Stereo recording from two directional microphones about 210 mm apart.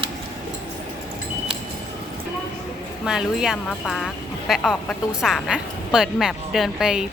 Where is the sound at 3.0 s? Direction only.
5° right (ahead or behind).